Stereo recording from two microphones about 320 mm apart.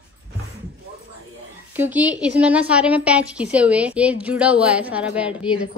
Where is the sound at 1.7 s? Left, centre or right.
Centre.